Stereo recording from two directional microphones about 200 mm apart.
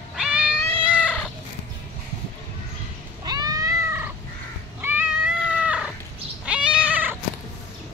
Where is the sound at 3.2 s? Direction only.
20° right (ahead or behind).